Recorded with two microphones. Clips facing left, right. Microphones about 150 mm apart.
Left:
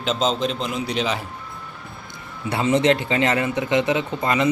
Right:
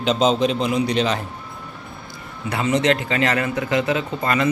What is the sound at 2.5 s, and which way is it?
A man's voice, 30° left (ahead or behind).